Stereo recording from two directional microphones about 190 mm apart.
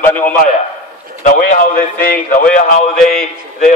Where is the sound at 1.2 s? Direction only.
45° left (ahead or behind).